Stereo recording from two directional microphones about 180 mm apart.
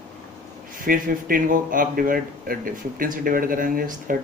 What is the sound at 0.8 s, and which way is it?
Speech, 50° right (ahead or behind).